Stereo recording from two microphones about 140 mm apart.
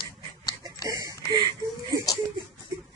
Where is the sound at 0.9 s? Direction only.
25° right (ahead or behind).